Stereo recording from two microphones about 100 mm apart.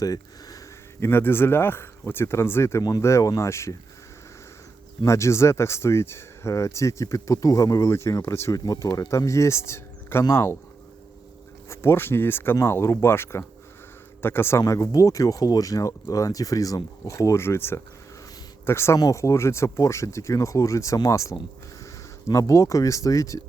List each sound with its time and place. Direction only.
0.9 s speech: 25° left (ahead or behind)
5.0 s speech: 30° left (ahead or behind)
11.7 s speech: 25° left (ahead or behind)